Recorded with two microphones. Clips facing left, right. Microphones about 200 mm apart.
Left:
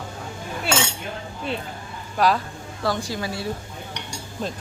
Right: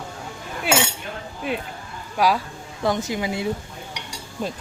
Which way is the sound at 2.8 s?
20° right (ahead or behind).